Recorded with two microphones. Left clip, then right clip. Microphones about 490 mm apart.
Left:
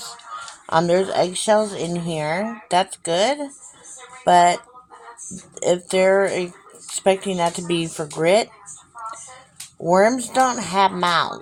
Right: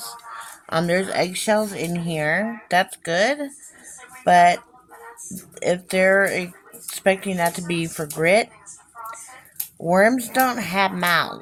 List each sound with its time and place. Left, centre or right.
0.8 s speech: right
9.8 s speech: right